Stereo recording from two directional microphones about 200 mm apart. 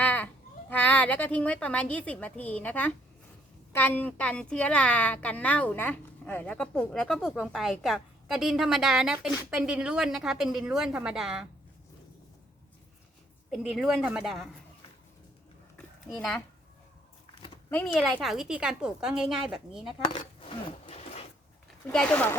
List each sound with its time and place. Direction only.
0.0 s a sound: 5° left (ahead or behind)
0.7 s a woman's voice: 5° left (ahead or behind)
13.5 s a woman's voice: centre (ahead or behind)
16.1 s a woman's voice: centre (ahead or behind)
17.7 s a woman's voice: 10° left (ahead or behind)
20.1 s a sound: 25° left (ahead or behind)
21.9 s speech: 5° left (ahead or behind)